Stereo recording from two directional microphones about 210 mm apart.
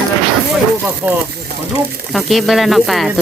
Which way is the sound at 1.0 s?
10° right (ahead or behind).